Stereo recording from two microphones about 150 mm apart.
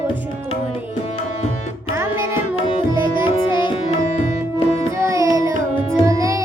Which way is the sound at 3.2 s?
35° left (ahead or behind).